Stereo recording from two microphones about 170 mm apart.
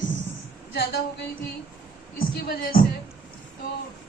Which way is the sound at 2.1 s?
60° left (ahead or behind).